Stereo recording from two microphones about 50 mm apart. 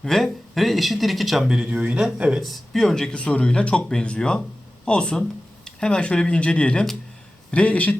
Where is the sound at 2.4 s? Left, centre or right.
Centre.